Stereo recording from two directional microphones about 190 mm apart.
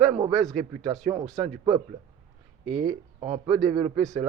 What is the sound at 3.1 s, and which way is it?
Speech, 40° right (ahead or behind).